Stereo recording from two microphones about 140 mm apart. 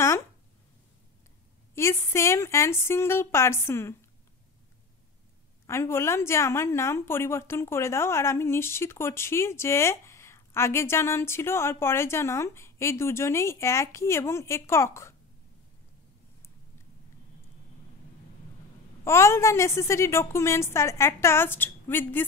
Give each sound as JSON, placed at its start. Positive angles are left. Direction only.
{"t": 1.8, "sound": "a woman's voice", "side_deg": 20}
{"t": 5.7, "sound": "a woman's voice", "side_deg": 20}
{"t": 19.0, "sound": "a woman's voice", "side_deg": 20}